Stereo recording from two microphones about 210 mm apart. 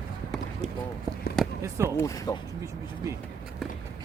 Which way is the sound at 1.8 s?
15° left (ahead or behind).